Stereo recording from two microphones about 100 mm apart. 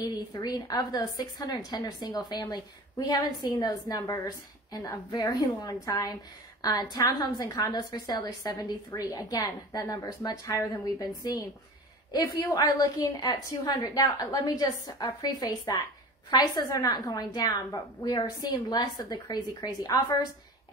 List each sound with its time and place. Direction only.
0.0 s a woman's voice: 40° left (ahead or behind)